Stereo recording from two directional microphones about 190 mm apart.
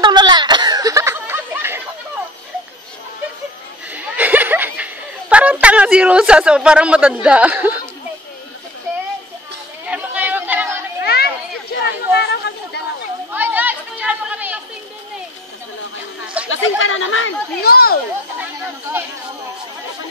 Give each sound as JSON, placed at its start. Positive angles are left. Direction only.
{"t": 0.0, "sound": "snicker", "side_deg": -25}
{"t": 3.9, "sound": "a sound", "side_deg": -10}
{"t": 5.3, "sound": "speech", "side_deg": -5}
{"t": 9.8, "sound": "chatter", "side_deg": -10}
{"t": 11.0, "sound": "children playing", "side_deg": 55}
{"t": 11.7, "sound": "a sound", "side_deg": 65}
{"t": 13.3, "sound": "chatter", "side_deg": -10}
{"t": 16.4, "sound": "speech", "side_deg": 90}
{"t": 17.6, "sound": "speech", "side_deg": 55}
{"t": 18.4, "sound": "a sound", "side_deg": -10}